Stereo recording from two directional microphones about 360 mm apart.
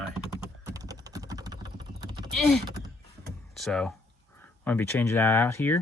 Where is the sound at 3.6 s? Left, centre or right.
Centre.